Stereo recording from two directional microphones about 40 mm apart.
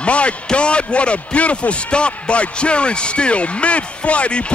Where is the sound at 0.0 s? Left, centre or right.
Left.